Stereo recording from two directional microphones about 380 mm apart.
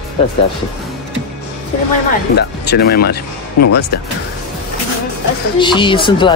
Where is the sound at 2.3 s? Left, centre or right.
Left.